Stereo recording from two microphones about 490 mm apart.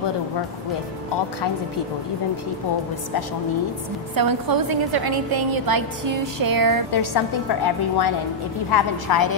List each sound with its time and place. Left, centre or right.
4.1 s a woman's voice: right
6.9 s a woman's voice: left